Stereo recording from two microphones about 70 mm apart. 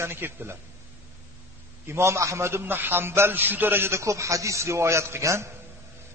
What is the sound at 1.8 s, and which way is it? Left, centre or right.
A man's voice, right.